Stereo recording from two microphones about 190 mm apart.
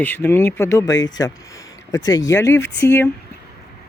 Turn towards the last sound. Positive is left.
turn(degrees=15)  # may be behind; listen again after turning